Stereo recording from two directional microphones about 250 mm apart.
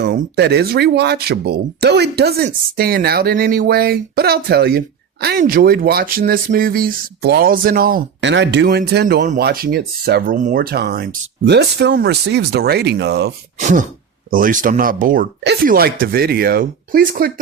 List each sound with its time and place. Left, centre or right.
0.0 s speech: right
13.6 s wail: right
14.3 s speech: right